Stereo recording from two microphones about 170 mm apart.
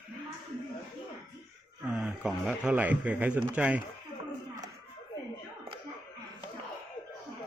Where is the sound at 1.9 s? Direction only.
5° right (ahead or behind).